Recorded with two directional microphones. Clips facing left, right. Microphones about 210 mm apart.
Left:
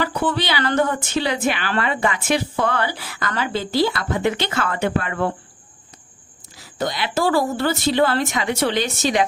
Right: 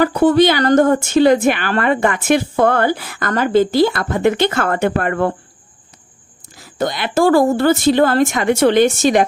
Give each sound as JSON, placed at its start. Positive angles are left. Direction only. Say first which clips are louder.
{"t": 0.0, "sound": "a woman's voice", "louder": "right 11 dB", "side_deg": -45}
{"t": 6.6, "sound": "a woman's voice", "louder": "right 4 dB", "side_deg": -50}